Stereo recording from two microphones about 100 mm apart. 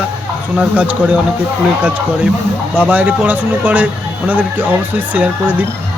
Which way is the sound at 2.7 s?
15° right (ahead or behind).